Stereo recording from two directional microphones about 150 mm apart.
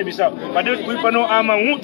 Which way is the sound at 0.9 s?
25° left (ahead or behind).